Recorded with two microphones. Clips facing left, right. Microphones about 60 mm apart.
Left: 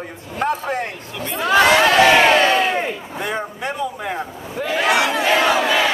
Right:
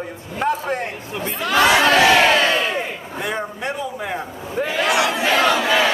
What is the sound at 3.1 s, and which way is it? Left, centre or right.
A man's voice, centre.